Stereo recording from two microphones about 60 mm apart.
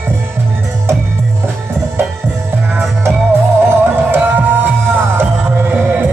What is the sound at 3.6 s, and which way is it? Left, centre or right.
Music, right.